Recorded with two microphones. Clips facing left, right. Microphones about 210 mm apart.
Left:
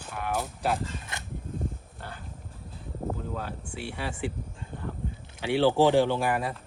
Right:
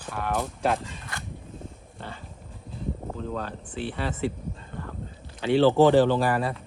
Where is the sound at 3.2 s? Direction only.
10° left (ahead or behind).